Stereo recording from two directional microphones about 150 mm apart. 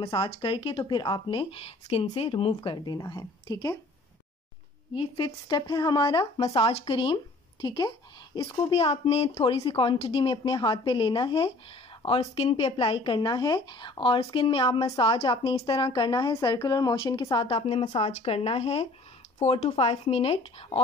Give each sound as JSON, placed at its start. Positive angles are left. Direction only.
{"t": 0.0, "sound": "speech", "side_deg": 35}
{"t": 4.9, "sound": "speech", "side_deg": 35}